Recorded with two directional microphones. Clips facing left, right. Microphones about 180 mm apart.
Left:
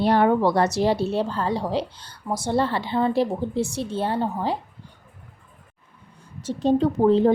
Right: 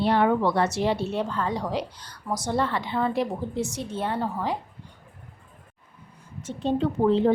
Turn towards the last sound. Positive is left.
turn(degrees=40)  # may be behind; listen again after turning